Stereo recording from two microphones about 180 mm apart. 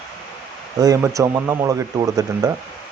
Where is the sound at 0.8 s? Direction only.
20° right (ahead or behind).